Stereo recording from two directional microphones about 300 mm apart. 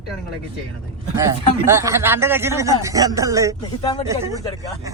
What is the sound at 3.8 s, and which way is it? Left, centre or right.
Speech, centre.